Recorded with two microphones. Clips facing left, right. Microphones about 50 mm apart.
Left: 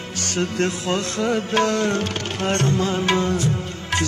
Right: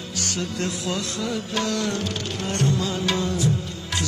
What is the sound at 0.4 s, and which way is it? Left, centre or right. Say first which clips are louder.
Music: left 7 dB; left.